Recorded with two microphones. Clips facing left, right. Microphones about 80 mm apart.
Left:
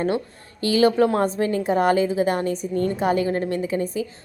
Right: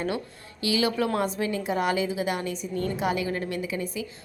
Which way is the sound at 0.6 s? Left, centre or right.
Left.